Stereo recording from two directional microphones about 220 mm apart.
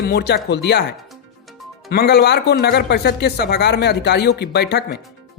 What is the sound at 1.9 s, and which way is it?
Speech, 50° left (ahead or behind).